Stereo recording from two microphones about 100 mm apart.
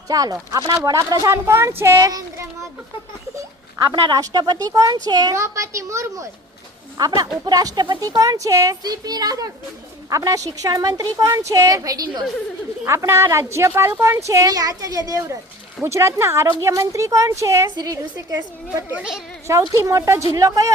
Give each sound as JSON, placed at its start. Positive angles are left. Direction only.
{"t": 0.1, "sound": "speech", "side_deg": -40}
{"t": 4.1, "sound": "speech", "side_deg": -40}
{"t": 17.7, "sound": "a woman's voice", "side_deg": -45}
{"t": 17.9, "sound": "speech", "side_deg": -35}
{"t": 18.9, "sound": "a woman's voice", "side_deg": -5}
{"t": 19.5, "sound": "speech", "side_deg": -30}